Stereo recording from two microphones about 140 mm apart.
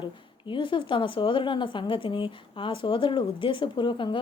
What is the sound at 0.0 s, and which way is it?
Speech, 35° left (ahead or behind).